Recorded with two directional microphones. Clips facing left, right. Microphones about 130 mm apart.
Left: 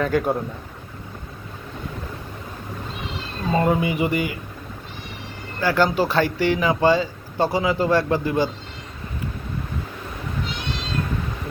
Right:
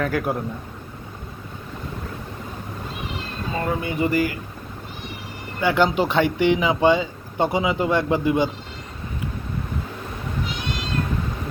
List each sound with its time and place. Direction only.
0.0 s a man's voice: centre (ahead or behind)
3.5 s speech: 20° left (ahead or behind)
4.0 s a man's voice: centre (ahead or behind)
5.5 s speech: 20° right (ahead or behind)